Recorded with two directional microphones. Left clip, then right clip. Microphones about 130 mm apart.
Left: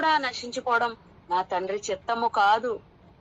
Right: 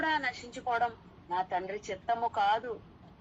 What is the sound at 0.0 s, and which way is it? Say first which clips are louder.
A woman's voice: left 7 dB; 40° left (ahead or behind).